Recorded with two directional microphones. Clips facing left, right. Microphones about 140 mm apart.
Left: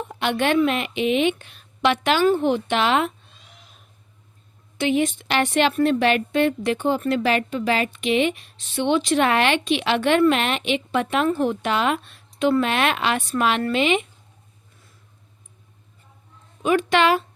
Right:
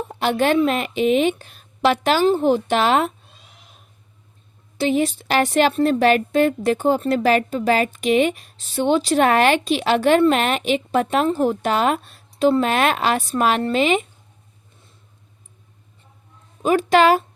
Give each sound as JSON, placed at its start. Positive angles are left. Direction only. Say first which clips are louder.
{"t": 0.1, "sound": "a woman's voice", "louder": "right 3 dB", "side_deg": -35}
{"t": 4.8, "sound": "a woman's voice", "louder": "right 2 dB", "side_deg": -35}
{"t": 16.6, "sound": "a woman's voice", "louder": "right 3 dB", "side_deg": -35}